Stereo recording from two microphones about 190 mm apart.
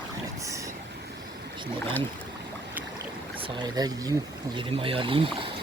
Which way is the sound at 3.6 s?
20° right (ahead or behind).